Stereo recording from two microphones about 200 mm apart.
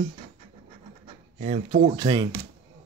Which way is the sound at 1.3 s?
35° right (ahead or behind).